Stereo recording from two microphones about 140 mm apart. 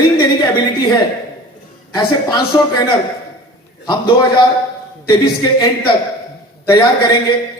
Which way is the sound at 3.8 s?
30° left (ahead or behind).